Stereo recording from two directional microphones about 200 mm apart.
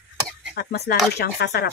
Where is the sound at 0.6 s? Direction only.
55° left (ahead or behind).